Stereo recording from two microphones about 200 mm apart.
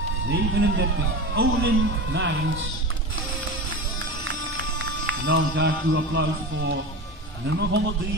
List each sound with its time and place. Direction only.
0.3 s speech: 55° right (ahead or behind); by 2.6 s 70° right (ahead or behind)
4.2 s music: 65° right (ahead or behind)
7.4 s speech: 65° right (ahead or behind)